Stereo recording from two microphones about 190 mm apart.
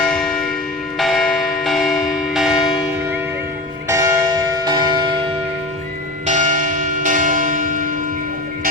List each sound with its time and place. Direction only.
0.0 s church bell: centre (ahead or behind)
3.8 s church bell: 15° right (ahead or behind)
6.2 s church bell: 40° right (ahead or behind)